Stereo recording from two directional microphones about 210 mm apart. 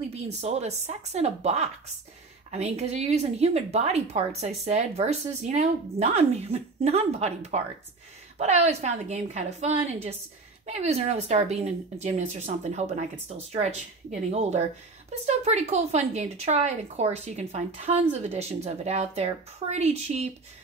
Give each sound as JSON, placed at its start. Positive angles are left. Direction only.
{"t": 0.1, "sound": "speech", "side_deg": -30}